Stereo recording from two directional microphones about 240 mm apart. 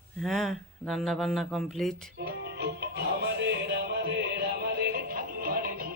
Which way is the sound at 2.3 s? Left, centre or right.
Right.